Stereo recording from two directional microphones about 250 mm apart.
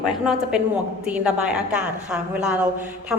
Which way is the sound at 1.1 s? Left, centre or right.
Centre.